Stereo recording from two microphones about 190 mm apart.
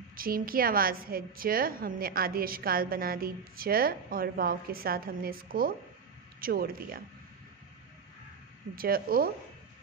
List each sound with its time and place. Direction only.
0.1 s a woman's voice: 50° right (ahead or behind)
8.7 s a woman's voice: 50° right (ahead or behind)